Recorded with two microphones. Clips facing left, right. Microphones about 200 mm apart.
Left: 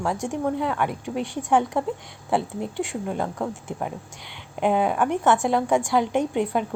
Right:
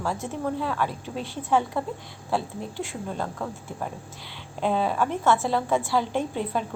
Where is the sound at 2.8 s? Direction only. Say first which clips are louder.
Left 4 dB; 15° left (ahead or behind).